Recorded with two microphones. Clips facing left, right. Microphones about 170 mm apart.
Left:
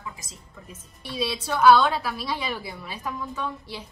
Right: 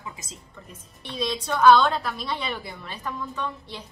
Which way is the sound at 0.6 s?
10° left (ahead or behind).